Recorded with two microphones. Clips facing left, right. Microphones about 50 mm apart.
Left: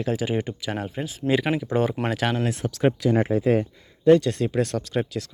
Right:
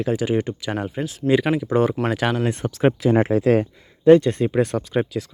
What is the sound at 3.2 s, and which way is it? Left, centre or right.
Speech, right.